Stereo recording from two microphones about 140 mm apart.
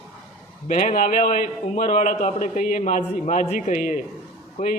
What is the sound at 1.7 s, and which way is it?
Speech, 60° left (ahead or behind).